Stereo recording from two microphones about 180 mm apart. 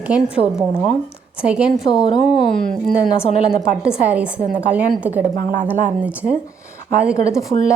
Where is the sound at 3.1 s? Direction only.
35° left (ahead or behind).